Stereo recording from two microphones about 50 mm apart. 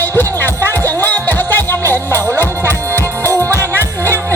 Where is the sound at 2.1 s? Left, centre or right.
Right.